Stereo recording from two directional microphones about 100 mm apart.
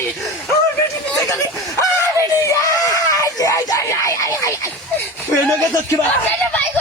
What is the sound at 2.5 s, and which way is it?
Screaming, 35° left (ahead or behind).